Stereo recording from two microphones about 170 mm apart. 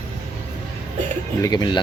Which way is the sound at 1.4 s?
25° left (ahead or behind).